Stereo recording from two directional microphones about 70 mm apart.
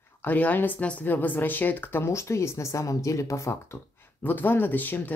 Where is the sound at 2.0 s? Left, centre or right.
Left.